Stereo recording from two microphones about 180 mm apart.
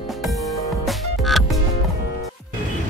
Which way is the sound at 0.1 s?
Centre (ahead or behind).